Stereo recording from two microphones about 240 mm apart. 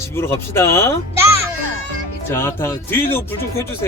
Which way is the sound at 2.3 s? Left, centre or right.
Centre.